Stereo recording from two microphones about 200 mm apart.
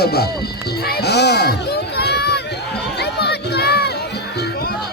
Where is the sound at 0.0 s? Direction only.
50° left (ahead or behind).